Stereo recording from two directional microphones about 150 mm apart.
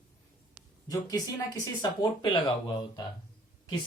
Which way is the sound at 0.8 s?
25° left (ahead or behind).